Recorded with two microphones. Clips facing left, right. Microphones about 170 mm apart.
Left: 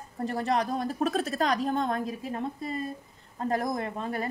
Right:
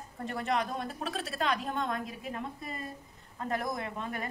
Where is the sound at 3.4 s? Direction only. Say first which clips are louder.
Left 5 dB; 35° left (ahead or behind).